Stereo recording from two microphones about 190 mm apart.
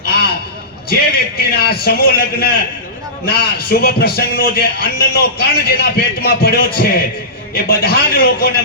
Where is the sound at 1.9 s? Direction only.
50° left (ahead or behind).